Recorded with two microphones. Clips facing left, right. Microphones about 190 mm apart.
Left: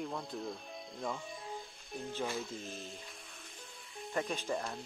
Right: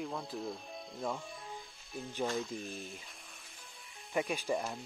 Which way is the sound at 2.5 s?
15° right (ahead or behind).